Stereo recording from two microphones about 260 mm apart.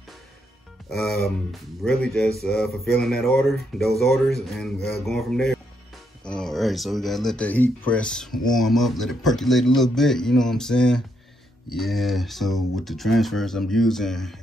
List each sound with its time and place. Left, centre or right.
0.8 s speech: centre